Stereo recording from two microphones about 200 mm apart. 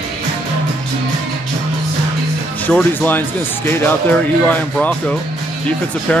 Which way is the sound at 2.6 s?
10° left (ahead or behind).